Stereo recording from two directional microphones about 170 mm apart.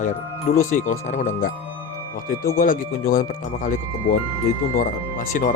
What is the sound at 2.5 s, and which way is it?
Speech, 55° left (ahead or behind).